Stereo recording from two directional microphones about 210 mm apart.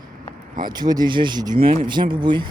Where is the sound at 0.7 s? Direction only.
20° right (ahead or behind).